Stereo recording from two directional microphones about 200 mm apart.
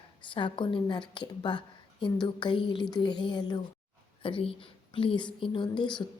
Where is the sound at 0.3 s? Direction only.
25° left (ahead or behind).